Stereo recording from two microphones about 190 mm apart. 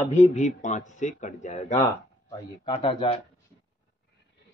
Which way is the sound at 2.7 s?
25° left (ahead or behind).